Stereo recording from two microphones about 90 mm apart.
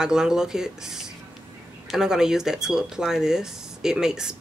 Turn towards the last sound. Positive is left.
turn(degrees=-5)  # may be behind; listen again after turning